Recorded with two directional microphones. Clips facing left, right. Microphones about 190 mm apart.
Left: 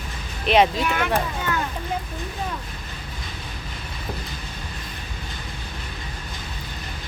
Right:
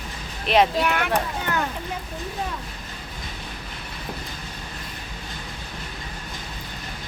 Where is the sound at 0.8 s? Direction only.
60° right (ahead or behind).